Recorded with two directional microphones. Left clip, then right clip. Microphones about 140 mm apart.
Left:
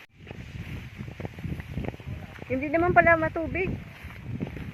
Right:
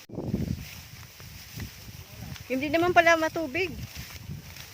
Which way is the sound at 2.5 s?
70° right (ahead or behind).